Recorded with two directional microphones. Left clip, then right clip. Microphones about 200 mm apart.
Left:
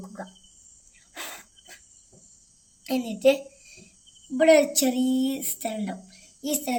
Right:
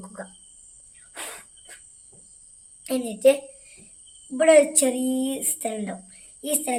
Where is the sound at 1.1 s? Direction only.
10° right (ahead or behind).